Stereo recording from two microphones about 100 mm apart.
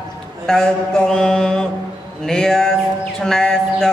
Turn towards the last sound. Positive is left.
turn(degrees=5)  # may be behind; listen again after turning